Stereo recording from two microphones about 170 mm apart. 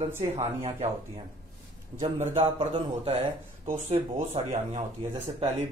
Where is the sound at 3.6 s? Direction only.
45° right (ahead or behind).